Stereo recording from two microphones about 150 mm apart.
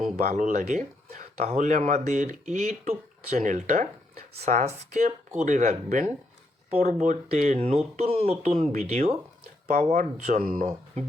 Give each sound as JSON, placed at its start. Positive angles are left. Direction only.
{"t": 0.0, "sound": "speech", "side_deg": -70}
{"t": 10.3, "sound": "speech", "side_deg": -70}